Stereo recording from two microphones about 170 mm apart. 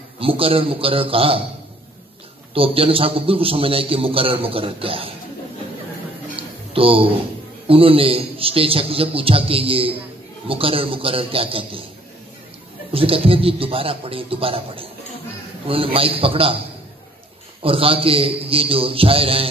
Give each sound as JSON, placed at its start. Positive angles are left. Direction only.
{"t": 0.2, "sound": "a man's voice", "side_deg": -35}
{"t": 2.5, "sound": "a man's voice", "side_deg": -35}
{"t": 6.7, "sound": "a man's voice", "side_deg": -35}
{"t": 12.9, "sound": "a man's voice", "side_deg": -35}
{"t": 17.6, "sound": "a man's voice", "side_deg": -35}